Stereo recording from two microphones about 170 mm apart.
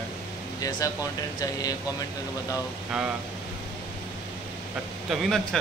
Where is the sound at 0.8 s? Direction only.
20° left (ahead or behind).